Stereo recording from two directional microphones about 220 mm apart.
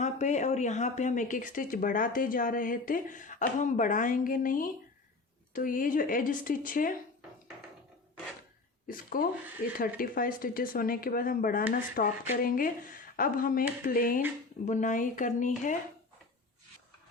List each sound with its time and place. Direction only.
0.0 s speech: 30° left (ahead or behind)
8.9 s speech: 40° left (ahead or behind)